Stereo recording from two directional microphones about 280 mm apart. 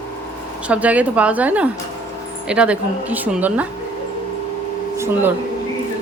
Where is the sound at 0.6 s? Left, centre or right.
Centre.